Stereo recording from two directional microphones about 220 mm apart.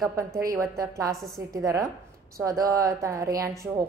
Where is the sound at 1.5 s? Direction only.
15° right (ahead or behind).